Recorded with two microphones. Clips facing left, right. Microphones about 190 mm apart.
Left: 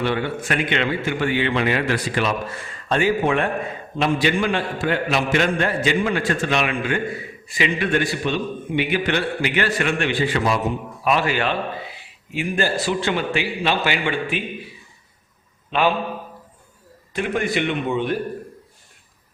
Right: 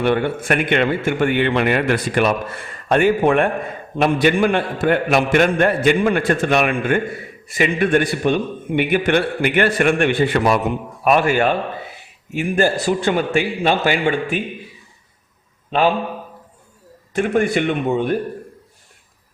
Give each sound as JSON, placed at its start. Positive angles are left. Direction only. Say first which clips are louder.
{"t": 0.0, "sound": "a man's voice", "louder": "right 5 dB", "side_deg": -55}
{"t": 17.2, "sound": "a man's voice", "louder": "right 5 dB", "side_deg": -45}